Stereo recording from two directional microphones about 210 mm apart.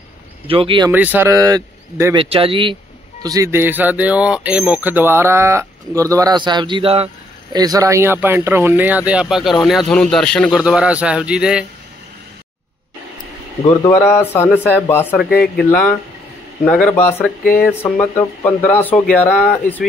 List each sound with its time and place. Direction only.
0.5 s speech: 25° right (ahead or behind)
0.9 s speech: 10° right (ahead or behind)
2.2 s speech: 25° right (ahead or behind); by 11.6 s 5° right (ahead or behind)
13.8 s speech: 10° left (ahead or behind)
15.2 s speech: 45° left (ahead or behind)
15.5 s speech: 5° left (ahead or behind)